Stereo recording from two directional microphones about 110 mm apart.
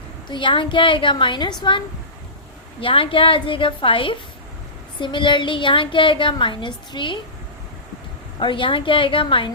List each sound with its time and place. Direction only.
0.3 s a woman's voice: 50° left (ahead or behind)
2.8 s a woman's voice: 55° left (ahead or behind)
8.4 s a woman's voice: 50° left (ahead or behind)